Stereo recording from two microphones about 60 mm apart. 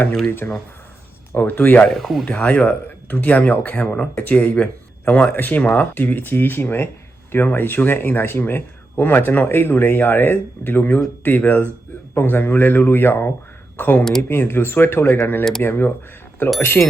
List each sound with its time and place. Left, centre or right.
0.3 s speech: left
1.9 s speech: centre
2.2 s speech: left
16.6 s speech: left